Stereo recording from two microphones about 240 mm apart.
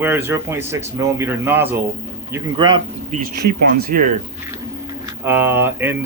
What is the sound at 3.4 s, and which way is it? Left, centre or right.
Speech, right.